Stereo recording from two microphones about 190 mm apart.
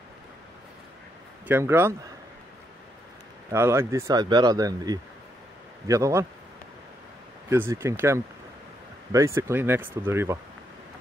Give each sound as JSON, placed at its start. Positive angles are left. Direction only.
{"t": 1.5, "sound": "speech", "side_deg": -10}
{"t": 3.4, "sound": "speech", "side_deg": -15}
{"t": 7.4, "sound": "speech", "side_deg": -15}